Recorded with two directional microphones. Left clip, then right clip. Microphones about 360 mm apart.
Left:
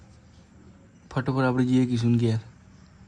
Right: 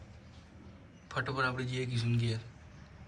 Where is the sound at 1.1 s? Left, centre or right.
Centre.